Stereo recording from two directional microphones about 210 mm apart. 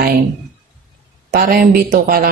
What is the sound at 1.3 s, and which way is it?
Speech, 50° right (ahead or behind).